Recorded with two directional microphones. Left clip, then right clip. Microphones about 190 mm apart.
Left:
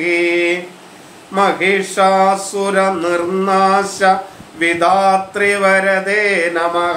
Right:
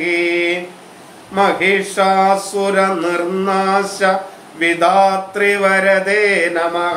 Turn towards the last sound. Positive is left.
turn(degrees=15)  # may be behind; listen again after turning